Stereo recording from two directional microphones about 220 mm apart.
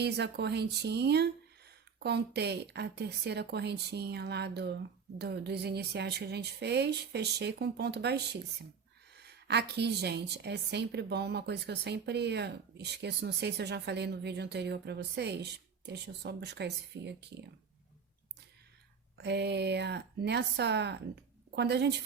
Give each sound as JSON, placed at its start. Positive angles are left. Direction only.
{"t": 0.0, "sound": "a woman's voice", "side_deg": -50}
{"t": 19.1, "sound": "a woman's voice", "side_deg": -50}